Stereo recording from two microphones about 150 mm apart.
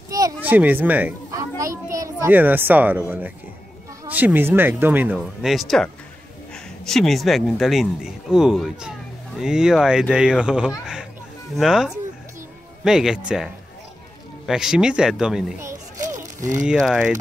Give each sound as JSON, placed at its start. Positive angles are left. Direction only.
{"t": 0.4, "sound": "speech", "side_deg": -10}
{"t": 1.3, "sound": "children playing", "side_deg": -20}
{"t": 2.3, "sound": "speech", "side_deg": -10}
{"t": 16.1, "sound": "a sound", "side_deg": -20}
{"t": 16.7, "sound": "speech", "side_deg": 0}